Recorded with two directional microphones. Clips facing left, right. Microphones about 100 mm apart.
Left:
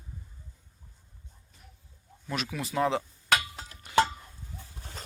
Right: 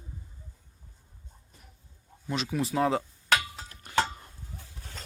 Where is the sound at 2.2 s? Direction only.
30° right (ahead or behind).